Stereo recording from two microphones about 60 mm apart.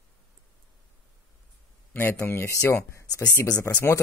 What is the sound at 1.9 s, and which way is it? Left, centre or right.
Speech, left.